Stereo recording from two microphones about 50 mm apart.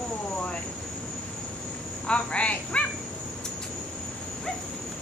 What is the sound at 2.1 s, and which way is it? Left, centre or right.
Cricket, left.